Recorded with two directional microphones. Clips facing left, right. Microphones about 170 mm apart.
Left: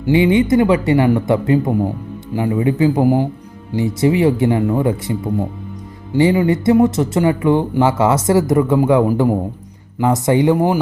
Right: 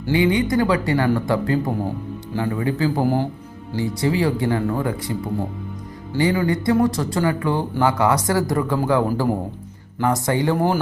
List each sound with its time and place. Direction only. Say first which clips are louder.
0.0 s speech: left 5 dB; 20° left (ahead or behind)
3.8 s speech: left 6 dB; 20° left (ahead or behind)